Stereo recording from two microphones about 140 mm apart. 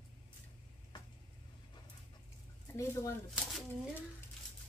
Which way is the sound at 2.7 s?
20° left (ahead or behind).